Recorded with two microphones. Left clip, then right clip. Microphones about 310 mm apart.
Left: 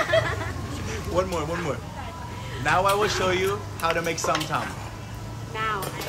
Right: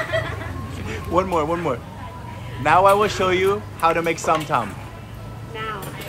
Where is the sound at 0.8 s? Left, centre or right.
Centre.